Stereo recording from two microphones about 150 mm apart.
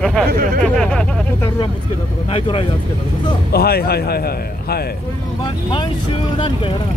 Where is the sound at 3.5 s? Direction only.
90° left.